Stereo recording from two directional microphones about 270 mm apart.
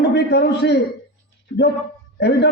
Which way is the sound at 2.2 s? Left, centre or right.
Left.